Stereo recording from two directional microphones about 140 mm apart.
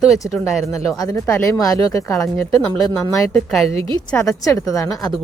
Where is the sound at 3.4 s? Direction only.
Centre (ahead or behind).